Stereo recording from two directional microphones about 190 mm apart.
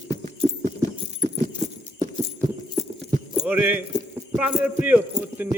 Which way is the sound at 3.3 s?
5° right (ahead or behind).